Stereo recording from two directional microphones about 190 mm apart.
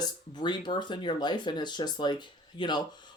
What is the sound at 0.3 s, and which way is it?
Speech, 25° left (ahead or behind).